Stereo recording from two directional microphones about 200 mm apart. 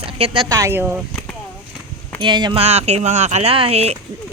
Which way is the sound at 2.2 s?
25° right (ahead or behind).